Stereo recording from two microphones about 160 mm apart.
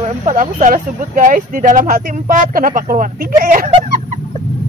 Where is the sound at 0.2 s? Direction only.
50° right (ahead or behind).